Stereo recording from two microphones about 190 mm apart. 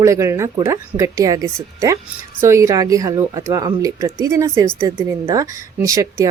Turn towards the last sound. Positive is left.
turn(degrees=-20)  # may be behind; listen again after turning